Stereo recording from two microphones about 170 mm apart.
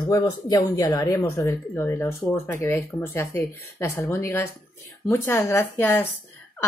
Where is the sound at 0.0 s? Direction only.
25° left (ahead or behind).